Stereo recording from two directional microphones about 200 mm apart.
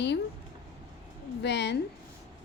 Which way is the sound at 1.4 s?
60° left (ahead or behind).